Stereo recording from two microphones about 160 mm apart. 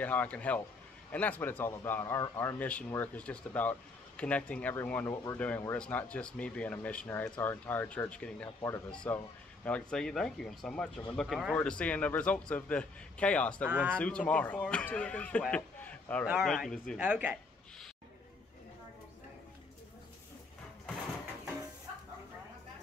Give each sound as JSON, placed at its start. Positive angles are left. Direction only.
{"t": 0.0, "sound": "speech", "side_deg": 10}
{"t": 5.8, "sound": "speech", "side_deg": 10}
{"t": 13.7, "sound": "speech", "side_deg": -10}
{"t": 13.9, "sound": "speech", "side_deg": 5}
{"t": 15.5, "sound": "a sound", "side_deg": 10}
{"t": 16.3, "sound": "speech", "side_deg": 0}
{"t": 17.0, "sound": "speech", "side_deg": -10}